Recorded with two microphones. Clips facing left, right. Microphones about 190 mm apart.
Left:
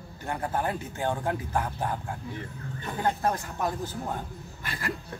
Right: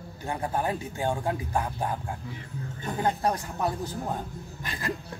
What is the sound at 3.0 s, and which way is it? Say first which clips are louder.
Speech: right 1 dB; 15° right (ahead or behind).